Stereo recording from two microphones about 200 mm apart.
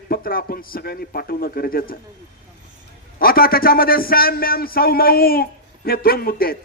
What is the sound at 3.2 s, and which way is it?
A man's voice, 50° left (ahead or behind).